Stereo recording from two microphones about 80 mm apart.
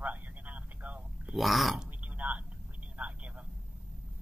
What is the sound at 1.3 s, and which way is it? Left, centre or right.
Speech, centre.